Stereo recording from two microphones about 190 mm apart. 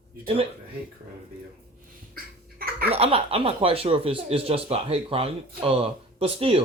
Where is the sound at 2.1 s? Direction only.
50° right (ahead or behind).